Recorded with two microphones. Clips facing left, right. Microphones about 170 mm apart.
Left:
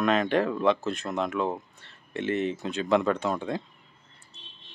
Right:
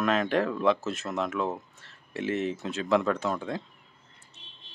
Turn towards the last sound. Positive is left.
turn(degrees=0)  # may be behind; listen again after turning